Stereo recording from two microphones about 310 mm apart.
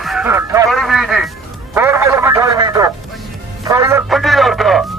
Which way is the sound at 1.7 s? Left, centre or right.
Centre.